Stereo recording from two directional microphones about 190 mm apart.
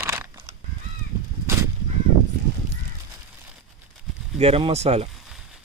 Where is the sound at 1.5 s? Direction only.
15° right (ahead or behind).